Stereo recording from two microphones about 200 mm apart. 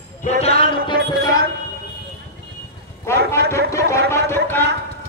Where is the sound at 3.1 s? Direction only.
15° left (ahead or behind).